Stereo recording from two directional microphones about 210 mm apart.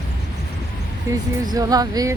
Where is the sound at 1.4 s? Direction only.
20° right (ahead or behind).